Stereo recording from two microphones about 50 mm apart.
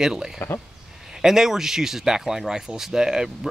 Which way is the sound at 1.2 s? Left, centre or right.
Centre.